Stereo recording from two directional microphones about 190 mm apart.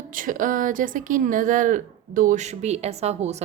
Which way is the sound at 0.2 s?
45° right (ahead or behind).